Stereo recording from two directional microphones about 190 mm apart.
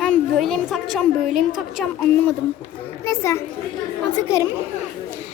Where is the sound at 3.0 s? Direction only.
15° left (ahead or behind).